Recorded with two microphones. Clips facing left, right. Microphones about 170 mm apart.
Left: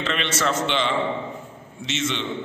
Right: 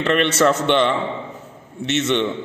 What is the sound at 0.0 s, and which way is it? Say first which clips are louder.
A man's voice: right 8 dB; 60° right (ahead or behind).